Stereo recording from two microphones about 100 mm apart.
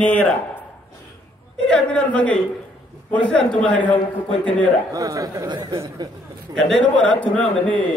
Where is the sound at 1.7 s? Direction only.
10° left (ahead or behind).